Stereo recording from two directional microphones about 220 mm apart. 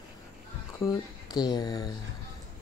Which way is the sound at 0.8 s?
20° left (ahead or behind).